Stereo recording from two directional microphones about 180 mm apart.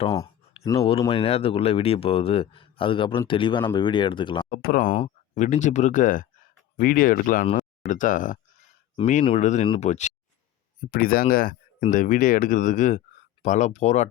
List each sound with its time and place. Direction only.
0.8 s speech: 35° left (ahead or behind)
4.4 s speech: 55° left (ahead or behind)
4.9 s speech: 35° left (ahead or behind)
10.8 s speech: 55° left (ahead or behind)